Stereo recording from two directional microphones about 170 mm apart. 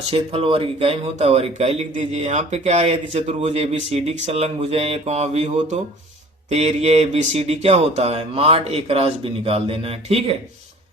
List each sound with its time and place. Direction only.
0.1 s speech: 35° right (ahead or behind)